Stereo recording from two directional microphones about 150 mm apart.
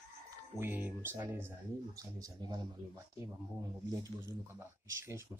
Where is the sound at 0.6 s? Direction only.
10° right (ahead or behind).